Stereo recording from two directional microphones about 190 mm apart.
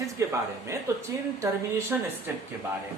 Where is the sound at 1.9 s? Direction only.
10° right (ahead or behind).